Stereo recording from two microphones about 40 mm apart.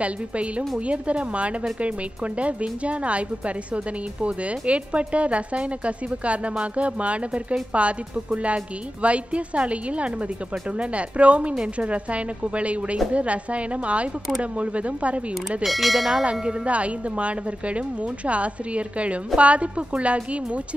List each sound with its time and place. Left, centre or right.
0.0 s speech: right
15.6 s speech: centre
16.3 s speech: right